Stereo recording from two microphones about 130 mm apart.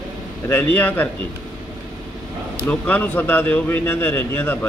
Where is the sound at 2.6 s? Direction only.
15° left (ahead or behind).